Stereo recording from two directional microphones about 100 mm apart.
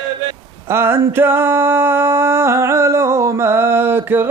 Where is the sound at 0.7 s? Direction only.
25° right (ahead or behind).